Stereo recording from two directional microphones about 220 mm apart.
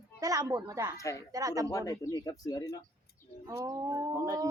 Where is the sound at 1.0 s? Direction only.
15° left (ahead or behind).